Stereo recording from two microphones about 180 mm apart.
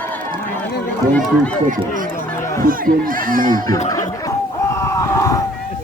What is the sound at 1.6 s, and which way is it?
Speech, 50° right (ahead or behind).